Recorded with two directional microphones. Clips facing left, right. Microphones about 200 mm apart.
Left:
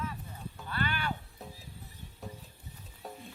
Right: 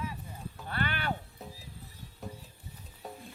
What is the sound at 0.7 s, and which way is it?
Music, 55° right (ahead or behind).